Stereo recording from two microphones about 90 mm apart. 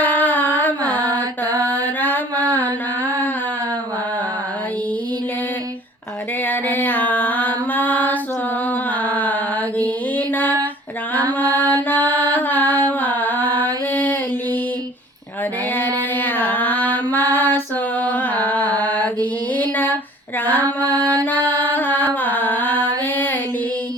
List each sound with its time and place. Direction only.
0.0 s a sound: 20° left (ahead or behind)
0.9 s mantra: 45° right (ahead or behind)
1.7 s mantra: 20° left (ahead or behind)
6.5 s music: 20° left (ahead or behind)
9.0 s mantra: 20° left (ahead or behind)
16.1 s female singing: 20° left (ahead or behind)
18.0 s music: 20° left (ahead or behind)
20.4 s female singing: 20° left (ahead or behind)
21.2 s music: 20° left (ahead or behind)